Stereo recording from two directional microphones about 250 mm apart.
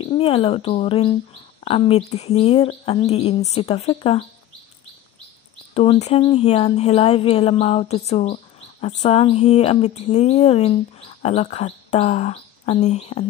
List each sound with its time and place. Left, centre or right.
0.0 s speech: left
5.8 s speech: left